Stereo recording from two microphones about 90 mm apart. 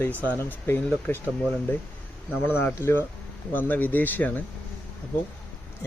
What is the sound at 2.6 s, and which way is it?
Speech, 25° left (ahead or behind).